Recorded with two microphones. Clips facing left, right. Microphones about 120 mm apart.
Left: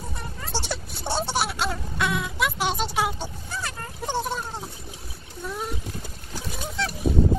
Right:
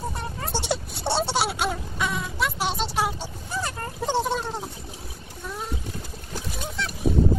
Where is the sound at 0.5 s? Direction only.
20° right (ahead or behind).